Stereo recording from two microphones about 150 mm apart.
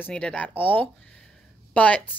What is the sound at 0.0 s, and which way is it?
A woman's voice, 5° left (ahead or behind).